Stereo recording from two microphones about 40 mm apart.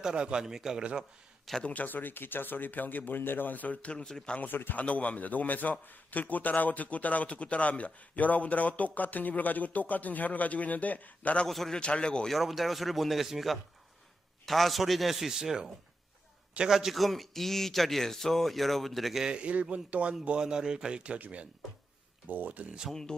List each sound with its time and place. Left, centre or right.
0.0 s a man's voice: right
1.5 s a man's voice: centre
1.9 s speech: left
3.2 s speech: left
4.0 s speech: centre
4.4 s speech: left
4.7 s a man's voice: left
11.4 s a man's voice: centre
11.7 s speech: left
12.3 s a man's voice: centre
16.7 s a man's voice: centre
19.2 s speech: right
22.3 s speech: right